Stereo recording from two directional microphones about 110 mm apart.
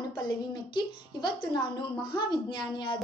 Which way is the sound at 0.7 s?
40° left (ahead or behind).